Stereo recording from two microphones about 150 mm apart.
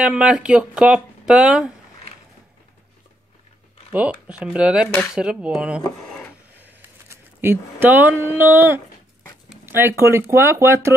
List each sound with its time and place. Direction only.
0.0 s speech: 5° right (ahead or behind)
3.9 s speech: 10° right (ahead or behind)
7.1 s speech: 15° right (ahead or behind)